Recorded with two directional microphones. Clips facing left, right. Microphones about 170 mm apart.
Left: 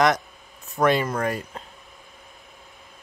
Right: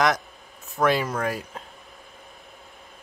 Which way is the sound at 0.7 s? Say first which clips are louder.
Left 2 dB; centre (ahead or behind).